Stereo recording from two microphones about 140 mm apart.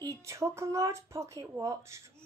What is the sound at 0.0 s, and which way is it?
A woman's voice, 20° right (ahead or behind).